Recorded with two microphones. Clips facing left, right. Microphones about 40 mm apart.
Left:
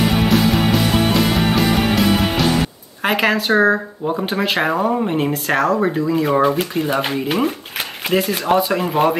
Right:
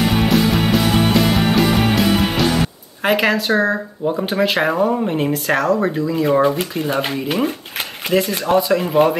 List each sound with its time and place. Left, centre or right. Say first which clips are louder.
0.1 s music: even; centre
3.0 s speech: right 1 dB; centre